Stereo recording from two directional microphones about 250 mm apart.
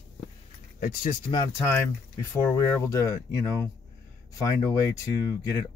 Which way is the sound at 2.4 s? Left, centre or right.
Centre.